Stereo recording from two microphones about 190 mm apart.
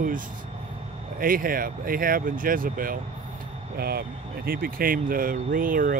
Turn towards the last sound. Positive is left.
turn(degrees=-45)  # may be behind; listen again after turning